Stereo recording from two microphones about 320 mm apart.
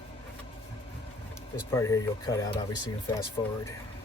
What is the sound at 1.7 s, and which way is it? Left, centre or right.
Speech, centre.